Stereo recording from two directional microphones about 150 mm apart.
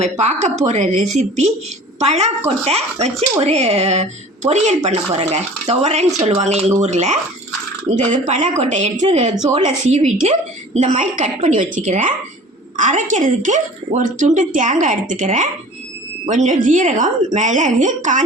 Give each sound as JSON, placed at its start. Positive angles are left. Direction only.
{"t": 0.0, "sound": "a woman's voice", "side_deg": -50}